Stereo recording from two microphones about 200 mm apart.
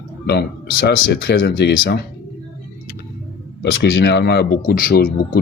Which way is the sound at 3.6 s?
60° left (ahead or behind).